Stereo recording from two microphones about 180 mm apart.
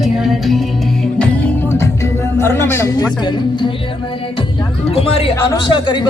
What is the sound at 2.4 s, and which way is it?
A woman's voice, 15° left (ahead or behind).